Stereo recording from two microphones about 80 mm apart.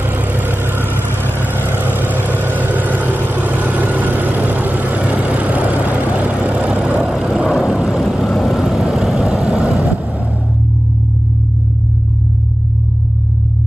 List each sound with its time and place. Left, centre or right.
0.0 s vehicle: right